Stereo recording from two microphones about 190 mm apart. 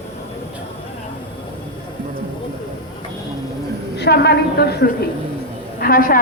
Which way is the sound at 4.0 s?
60° left (ahead or behind).